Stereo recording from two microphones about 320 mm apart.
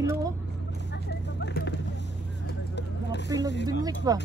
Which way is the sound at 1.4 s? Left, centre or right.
Left.